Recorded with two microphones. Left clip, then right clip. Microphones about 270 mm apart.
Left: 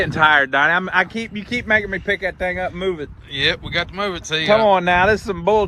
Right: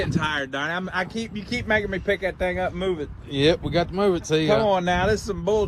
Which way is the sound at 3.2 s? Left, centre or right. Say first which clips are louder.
Left 1 dB; centre.